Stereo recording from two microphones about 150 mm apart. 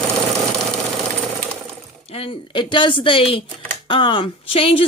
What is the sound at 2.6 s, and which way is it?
Speech, 35° left (ahead or behind).